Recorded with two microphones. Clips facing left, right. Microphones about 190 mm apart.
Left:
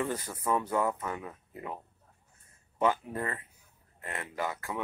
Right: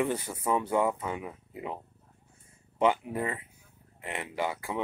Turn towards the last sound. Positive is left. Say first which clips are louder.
# right 3 dB
turn(degrees=-15)  # may be behind; listen again after turning